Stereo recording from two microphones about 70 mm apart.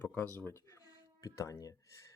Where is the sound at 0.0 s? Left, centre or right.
Left.